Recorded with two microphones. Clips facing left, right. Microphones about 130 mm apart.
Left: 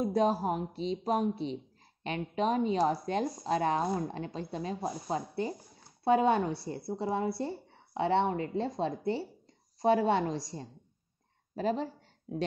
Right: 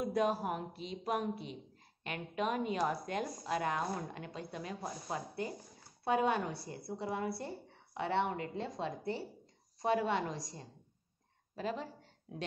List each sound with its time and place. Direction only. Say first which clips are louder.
0.0 s a woman's voice: left 5 dB; 30° left (ahead or behind)